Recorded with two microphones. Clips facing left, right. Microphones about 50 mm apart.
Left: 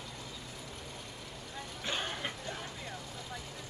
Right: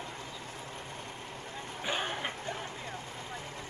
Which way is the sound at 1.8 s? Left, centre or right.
Centre.